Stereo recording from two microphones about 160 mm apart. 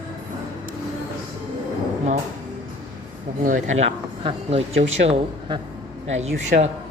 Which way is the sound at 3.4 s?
50° right (ahead or behind).